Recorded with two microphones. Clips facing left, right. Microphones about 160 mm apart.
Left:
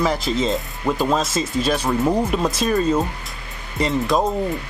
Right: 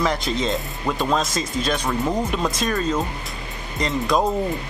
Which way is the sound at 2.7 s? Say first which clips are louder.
Left 7 dB; 20° left (ahead or behind).